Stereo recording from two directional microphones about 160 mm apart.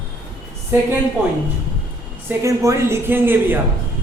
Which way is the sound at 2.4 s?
20° right (ahead or behind).